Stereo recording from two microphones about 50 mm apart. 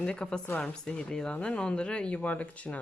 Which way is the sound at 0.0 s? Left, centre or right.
Centre.